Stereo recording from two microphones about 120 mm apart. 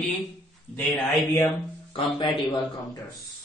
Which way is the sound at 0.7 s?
20° left (ahead or behind).